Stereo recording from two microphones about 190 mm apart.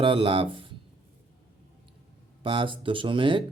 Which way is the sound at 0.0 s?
25° right (ahead or behind).